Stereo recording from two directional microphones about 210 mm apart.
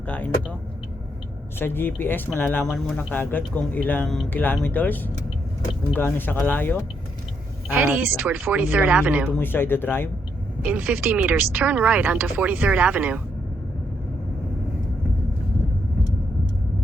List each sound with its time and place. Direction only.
1.5 s speech: 10° left (ahead or behind)
7.7 s speech: 5° right (ahead or behind)
9.3 s speech: 10° left (ahead or behind)
10.6 s speech: 10° right (ahead or behind)